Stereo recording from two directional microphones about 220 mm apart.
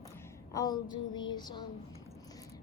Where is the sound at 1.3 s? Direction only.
20° left (ahead or behind).